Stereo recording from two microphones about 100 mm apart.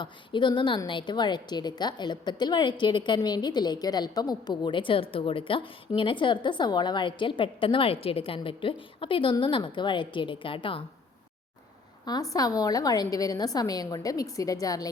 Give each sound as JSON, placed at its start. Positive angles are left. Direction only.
{"t": 0.0, "sound": "a woman's voice", "side_deg": 50}
{"t": 12.3, "sound": "a woman's voice", "side_deg": 35}